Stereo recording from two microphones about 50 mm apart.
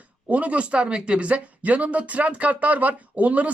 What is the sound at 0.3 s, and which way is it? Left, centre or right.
Speech, right.